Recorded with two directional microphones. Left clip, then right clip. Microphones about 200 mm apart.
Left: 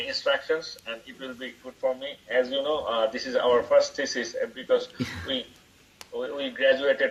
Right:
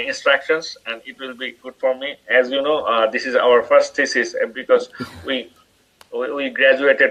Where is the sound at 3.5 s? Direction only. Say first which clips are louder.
Right 7 dB; 45° right (ahead or behind).